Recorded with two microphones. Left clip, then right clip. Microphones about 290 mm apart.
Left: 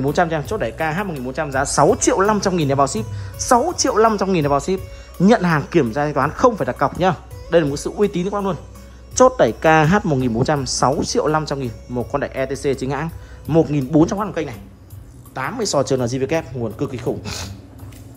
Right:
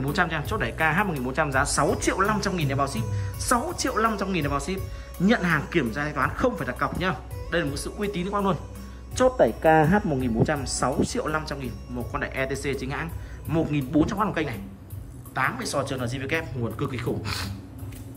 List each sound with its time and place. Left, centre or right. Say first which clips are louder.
0.0 s a woman's voice: left 7 dB; centre
9.8 s speech: left 6 dB; right
10.2 s speech: left 6 dB; centre